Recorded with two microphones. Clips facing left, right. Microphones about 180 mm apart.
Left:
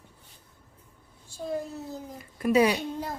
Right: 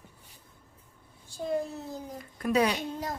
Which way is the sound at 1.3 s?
Centre (ahead or behind).